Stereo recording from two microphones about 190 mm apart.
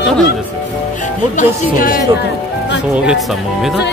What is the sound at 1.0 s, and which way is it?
Speech, 45° left (ahead or behind).